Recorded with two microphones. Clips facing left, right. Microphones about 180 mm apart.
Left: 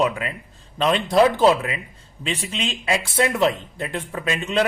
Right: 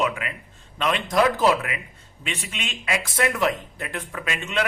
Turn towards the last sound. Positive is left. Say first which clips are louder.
# left 5 dB
turn(degrees=30)  # may be behind; listen again after turning